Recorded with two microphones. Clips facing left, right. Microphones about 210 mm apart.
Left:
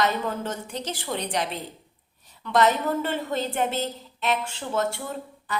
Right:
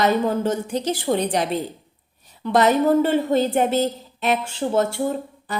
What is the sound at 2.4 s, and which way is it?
A woman's voice, 40° right (ahead or behind).